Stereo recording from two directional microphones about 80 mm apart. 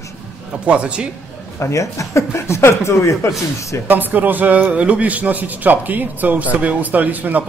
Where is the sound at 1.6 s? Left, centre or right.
Left.